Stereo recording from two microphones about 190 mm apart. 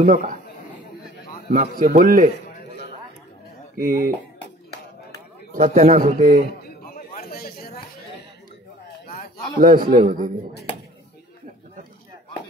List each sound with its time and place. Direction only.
0.0 s a man's voice: 45° right (ahead or behind)
1.8 s a man's voice: 45° right (ahead or behind)
3.7 s a man's voice: 50° right (ahead or behind)
5.5 s a man's voice: 45° right (ahead or behind)
6.6 s a sound: 50° left (ahead or behind)
9.0 s a sound: 50° left (ahead or behind)
9.6 s a man's voice: 45° right (ahead or behind)